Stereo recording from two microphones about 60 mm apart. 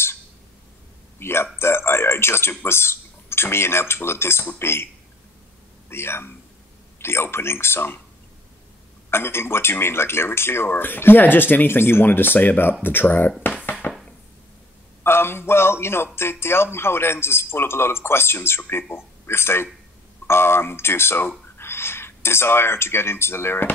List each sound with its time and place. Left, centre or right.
1.2 s a sound: left
2.6 s speech: left
5.9 s a man's voice: left
9.1 s speech: left
13.8 s a sound: left
15.0 s a man's voice: left